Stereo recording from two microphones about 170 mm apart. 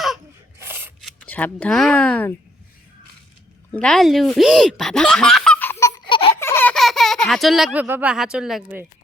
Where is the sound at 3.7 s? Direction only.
5° left (ahead or behind).